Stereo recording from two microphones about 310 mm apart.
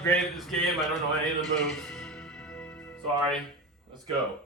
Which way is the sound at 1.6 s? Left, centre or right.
Centre.